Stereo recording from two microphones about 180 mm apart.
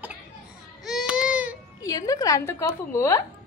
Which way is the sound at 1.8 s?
20° left (ahead or behind).